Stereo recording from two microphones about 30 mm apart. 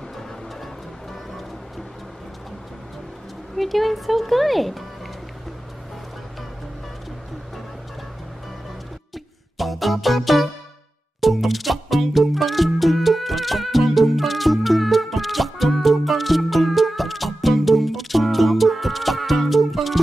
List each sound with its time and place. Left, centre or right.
3.5 s speech: centre
9.6 s music: centre